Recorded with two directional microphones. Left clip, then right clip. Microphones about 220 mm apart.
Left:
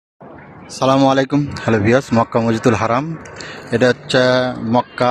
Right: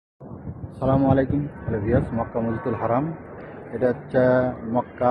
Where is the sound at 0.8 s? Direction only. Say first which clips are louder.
Left 7 dB; 35° left (ahead or behind).